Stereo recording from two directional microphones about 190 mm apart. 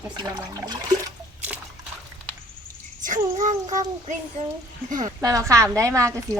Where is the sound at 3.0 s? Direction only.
40° right (ahead or behind).